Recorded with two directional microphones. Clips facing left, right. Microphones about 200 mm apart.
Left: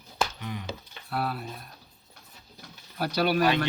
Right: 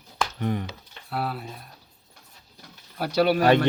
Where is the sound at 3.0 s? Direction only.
25° right (ahead or behind).